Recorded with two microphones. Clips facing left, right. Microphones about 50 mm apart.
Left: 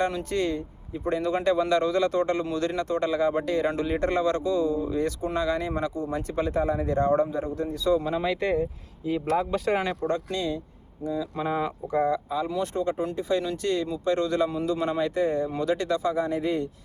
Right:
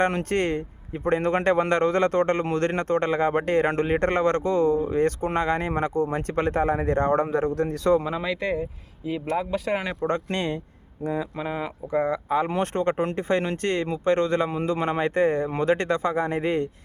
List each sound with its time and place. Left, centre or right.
0.0 s a man's voice: right
8.4 s speech: centre
10.1 s a man's voice: right
11.0 s speech: right
11.3 s speech: centre
11.9 s speech: right
12.3 s a man's voice: right